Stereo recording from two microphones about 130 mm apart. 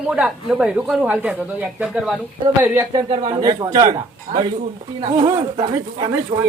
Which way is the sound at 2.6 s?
15° right (ahead or behind).